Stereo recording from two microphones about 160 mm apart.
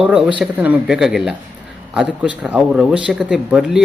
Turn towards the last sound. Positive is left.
turn(degrees=-5)  # may be behind; listen again after turning